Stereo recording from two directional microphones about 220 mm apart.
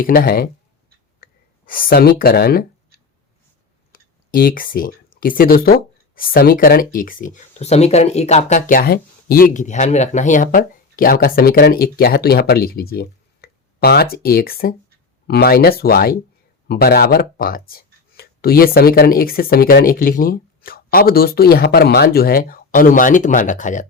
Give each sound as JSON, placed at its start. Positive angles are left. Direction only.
{"t": 0.0, "sound": "speech", "side_deg": 40}
{"t": 3.9, "sound": "speech", "side_deg": 40}